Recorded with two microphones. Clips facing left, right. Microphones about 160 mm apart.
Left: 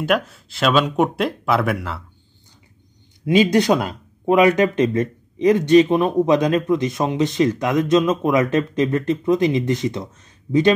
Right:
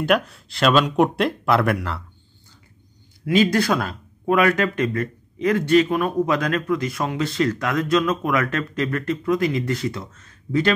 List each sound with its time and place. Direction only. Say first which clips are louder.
0.0 s speech: even; centre (ahead or behind)
3.3 s speech: left 3 dB; 20° left (ahead or behind)